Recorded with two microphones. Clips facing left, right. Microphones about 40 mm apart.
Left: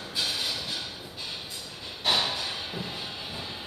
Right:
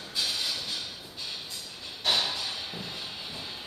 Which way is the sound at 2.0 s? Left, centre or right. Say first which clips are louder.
Left 2 dB; centre.